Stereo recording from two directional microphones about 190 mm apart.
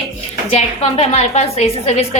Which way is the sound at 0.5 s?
35° left (ahead or behind).